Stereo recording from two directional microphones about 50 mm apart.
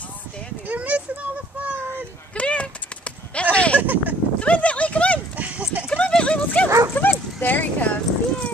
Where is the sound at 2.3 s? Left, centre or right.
Left.